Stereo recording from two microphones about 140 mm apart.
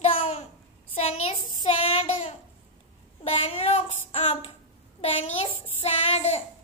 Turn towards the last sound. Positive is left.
turn(degrees=50)  # may be behind; listen again after turning